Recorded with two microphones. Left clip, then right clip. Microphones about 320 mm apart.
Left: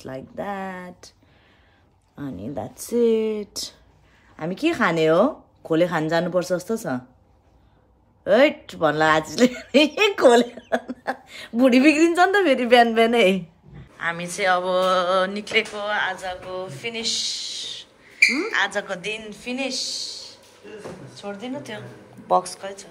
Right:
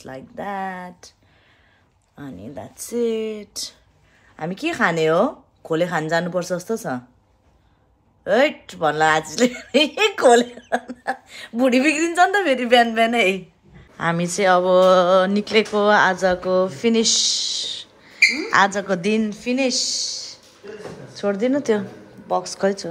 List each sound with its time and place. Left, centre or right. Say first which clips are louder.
0.0 s speech: even; centre
2.1 s speech: left 4 dB; centre
8.2 s speech: left 1 dB; centre
13.9 s speech: right 4 dB; centre
22.3 s speech: left 3 dB; centre